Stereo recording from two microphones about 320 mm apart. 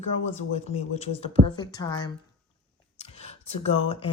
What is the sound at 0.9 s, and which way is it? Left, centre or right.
Speech, centre.